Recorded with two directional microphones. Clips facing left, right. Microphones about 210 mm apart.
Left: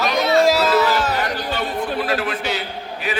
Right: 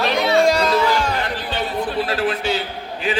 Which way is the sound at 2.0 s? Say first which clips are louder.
Right 1 dB; 30° right (ahead or behind).